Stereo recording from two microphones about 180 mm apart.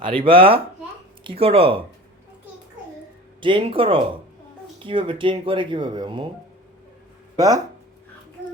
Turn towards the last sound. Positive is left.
turn(degrees=-20)  # may be behind; listen again after turning